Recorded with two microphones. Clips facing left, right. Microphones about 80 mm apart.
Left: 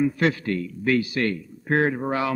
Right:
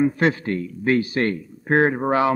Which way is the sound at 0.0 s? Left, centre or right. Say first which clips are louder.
Right 3 dB; right.